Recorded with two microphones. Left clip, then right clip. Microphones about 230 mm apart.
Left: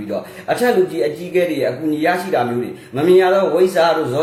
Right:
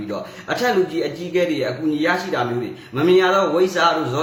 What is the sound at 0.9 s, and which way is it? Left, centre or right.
A man's voice, centre.